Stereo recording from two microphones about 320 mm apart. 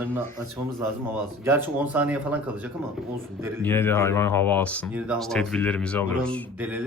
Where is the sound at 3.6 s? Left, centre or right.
Centre.